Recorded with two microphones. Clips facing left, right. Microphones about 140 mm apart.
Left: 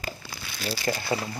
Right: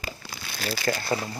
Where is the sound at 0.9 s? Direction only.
20° left (ahead or behind).